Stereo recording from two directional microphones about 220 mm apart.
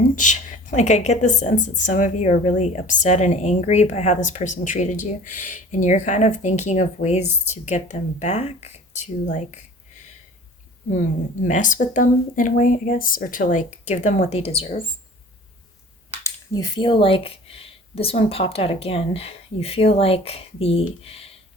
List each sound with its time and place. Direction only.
0.2 s a woman's voice: 35° left (ahead or behind)
10.9 s a woman's voice: 35° left (ahead or behind)
16.2 s speech: 15° left (ahead or behind)